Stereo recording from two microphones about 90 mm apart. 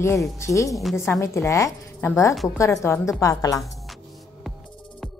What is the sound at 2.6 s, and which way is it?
A woman's voice, 30° left (ahead or behind).